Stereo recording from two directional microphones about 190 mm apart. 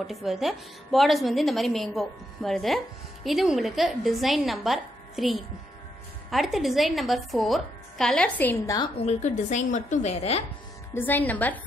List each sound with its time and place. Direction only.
0.0 s a woman's voice: centre (ahead or behind)
8.7 s a woman's voice: 30° left (ahead or behind)
11.0 s a woman's voice: 10° left (ahead or behind)